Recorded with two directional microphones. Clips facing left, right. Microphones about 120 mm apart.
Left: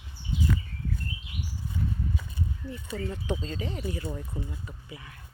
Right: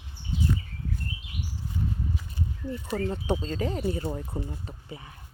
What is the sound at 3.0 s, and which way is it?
Speech, 35° right (ahead or behind).